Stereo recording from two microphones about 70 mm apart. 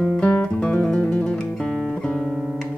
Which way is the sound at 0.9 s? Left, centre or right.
Centre.